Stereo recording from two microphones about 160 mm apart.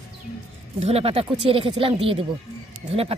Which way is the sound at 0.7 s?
40° right (ahead or behind).